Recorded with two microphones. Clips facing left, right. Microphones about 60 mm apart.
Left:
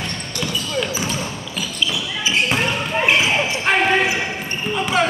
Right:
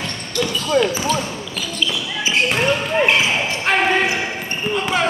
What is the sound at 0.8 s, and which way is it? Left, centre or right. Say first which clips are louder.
Basketball bounce: right 8 dB; right.